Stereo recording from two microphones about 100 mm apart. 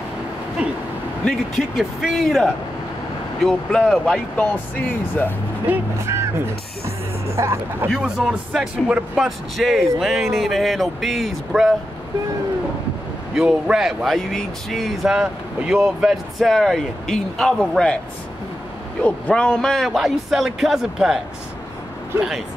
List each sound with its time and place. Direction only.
0.6 s a sound: 10° right (ahead or behind)
1.6 s speech: 5° right (ahead or behind); by 5.3 s 20° left (ahead or behind)
5.7 s speech: 25° right (ahead or behind)
7.9 s speech: 10° right (ahead or behind)
13.3 s speech: 5° right (ahead or behind)
19.0 s speech: 10° left (ahead or behind); by 21.2 s 5° right (ahead or behind)